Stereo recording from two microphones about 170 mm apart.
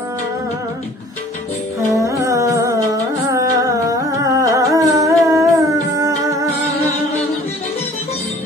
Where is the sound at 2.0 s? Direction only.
20° right (ahead or behind).